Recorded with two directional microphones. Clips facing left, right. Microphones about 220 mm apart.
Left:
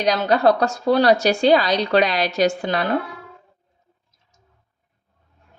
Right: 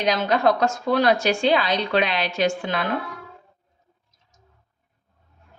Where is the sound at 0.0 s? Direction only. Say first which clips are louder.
Left 3 dB; 35° left (ahead or behind).